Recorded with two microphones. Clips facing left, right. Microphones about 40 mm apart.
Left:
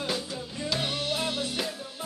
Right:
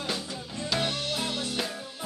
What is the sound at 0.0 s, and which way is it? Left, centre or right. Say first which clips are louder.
Music: left 2 dB; centre.